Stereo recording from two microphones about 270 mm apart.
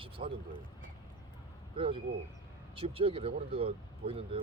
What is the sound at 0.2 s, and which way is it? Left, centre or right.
Speech, right.